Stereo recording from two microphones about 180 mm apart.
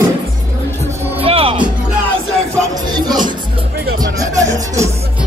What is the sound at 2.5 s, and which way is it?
Music, 20° right (ahead or behind).